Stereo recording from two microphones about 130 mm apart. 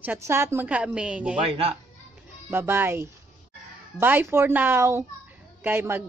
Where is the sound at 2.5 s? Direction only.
15° right (ahead or behind).